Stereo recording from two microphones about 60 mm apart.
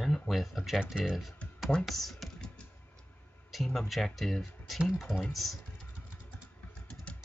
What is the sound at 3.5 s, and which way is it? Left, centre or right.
Speech, centre.